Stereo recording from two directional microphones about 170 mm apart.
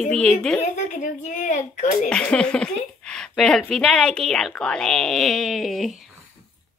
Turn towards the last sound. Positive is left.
turn(degrees=0)  # may be behind; listen again after turning